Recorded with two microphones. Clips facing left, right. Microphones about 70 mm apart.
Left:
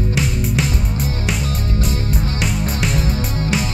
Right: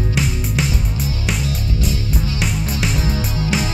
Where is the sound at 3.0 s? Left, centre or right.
Left.